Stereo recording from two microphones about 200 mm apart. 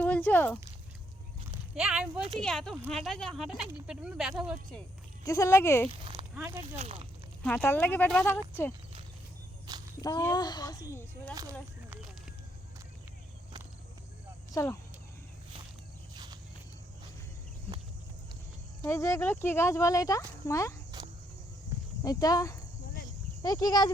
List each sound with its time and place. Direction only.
0.0 s a sound: 10° left (ahead or behind)
1.7 s speech: 5° right (ahead or behind)
5.2 s speech: 15° left (ahead or behind)
6.3 s speech: 15° right (ahead or behind)
6.7 s speech: 30° right (ahead or behind)
7.4 s speech: 10° left (ahead or behind)
10.0 s speech: 15° left (ahead or behind)
14.5 s speech: 15° left (ahead or behind)
16.1 s walk: 20° right (ahead or behind)
18.8 s speech: 15° left (ahead or behind)
22.0 s speech: 20° left (ahead or behind)